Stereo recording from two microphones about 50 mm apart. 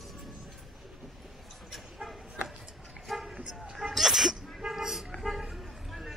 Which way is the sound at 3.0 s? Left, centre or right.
Centre.